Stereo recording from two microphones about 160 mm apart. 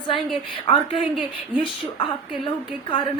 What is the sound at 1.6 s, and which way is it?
A woman's voice, 30° left (ahead or behind).